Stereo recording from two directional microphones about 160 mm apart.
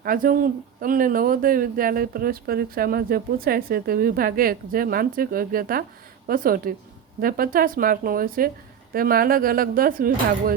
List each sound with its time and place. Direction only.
0.0 s speech: 60° right (ahead or behind)